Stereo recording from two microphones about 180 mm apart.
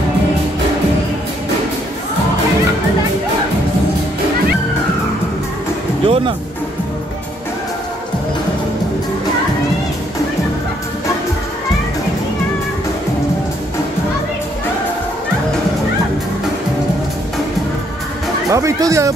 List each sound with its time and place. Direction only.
6.0 s music: 30° right (ahead or behind)
18.5 s speech: 15° right (ahead or behind)